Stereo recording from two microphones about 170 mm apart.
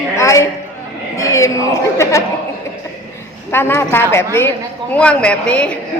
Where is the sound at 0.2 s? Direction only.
15° left (ahead or behind).